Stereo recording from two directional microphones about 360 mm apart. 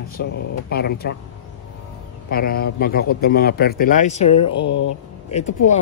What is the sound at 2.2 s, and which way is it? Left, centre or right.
Speech, left.